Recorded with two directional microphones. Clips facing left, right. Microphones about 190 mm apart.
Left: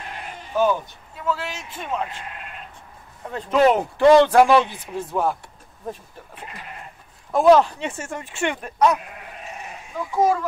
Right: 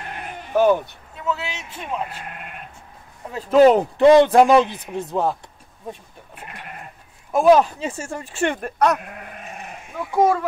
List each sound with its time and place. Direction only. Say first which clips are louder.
0.1 s bleat: right 5 dB; 60° right (ahead or behind)
1.2 s a man's voice: even; centre (ahead or behind)
2.2 s sheep: right 1 dB; 55° right (ahead or behind)
3.5 s speech: right 4 dB; 35° right (ahead or behind)
4.0 s a man's voice: right 1 dB; 20° right (ahead or behind)
7.3 s speech: even; 15° right (ahead or behind); by 8.9 s 55° right (ahead or behind)
10.1 s a child's voice: right 2 dB; 60° right (ahead or behind)